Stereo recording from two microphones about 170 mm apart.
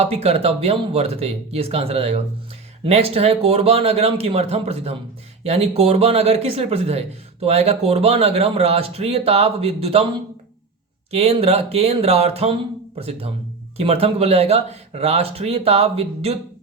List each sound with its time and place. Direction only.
0.0 s speech: 35° right (ahead or behind)
11.1 s speech: 35° right (ahead or behind)